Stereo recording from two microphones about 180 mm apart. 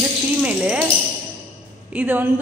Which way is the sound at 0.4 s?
5° right (ahead or behind).